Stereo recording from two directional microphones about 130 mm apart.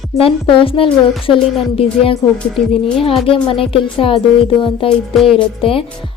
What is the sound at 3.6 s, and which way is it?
Speech, 45° left (ahead or behind).